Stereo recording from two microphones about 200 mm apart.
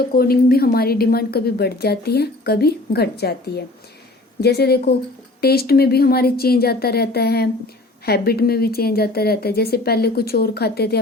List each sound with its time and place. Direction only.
0.1 s a woman's voice: 50° left (ahead or behind)